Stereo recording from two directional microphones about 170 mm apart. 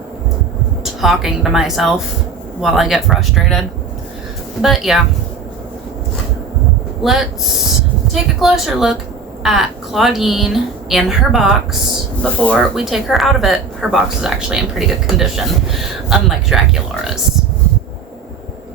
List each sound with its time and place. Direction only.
1.0 s speech: centre (ahead or behind)
4.6 s speech: centre (ahead or behind)
7.0 s speech: centre (ahead or behind)
8.4 s speech: 5° right (ahead or behind)